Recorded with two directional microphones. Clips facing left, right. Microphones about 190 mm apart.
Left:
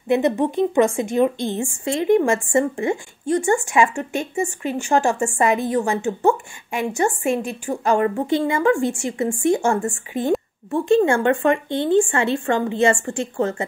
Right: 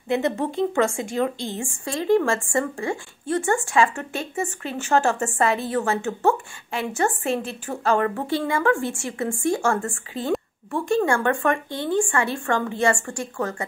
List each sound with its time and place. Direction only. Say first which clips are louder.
0.1 s a woman's voice: left 5 dB; 20° left (ahead or behind)